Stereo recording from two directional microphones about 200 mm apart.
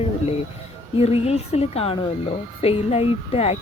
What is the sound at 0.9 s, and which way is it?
A woman's voice, 30° left (ahead or behind).